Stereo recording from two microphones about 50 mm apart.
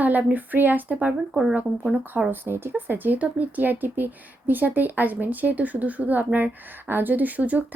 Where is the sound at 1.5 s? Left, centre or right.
Right.